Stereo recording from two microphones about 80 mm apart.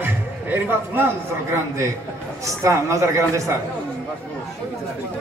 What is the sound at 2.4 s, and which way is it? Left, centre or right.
Speech, right.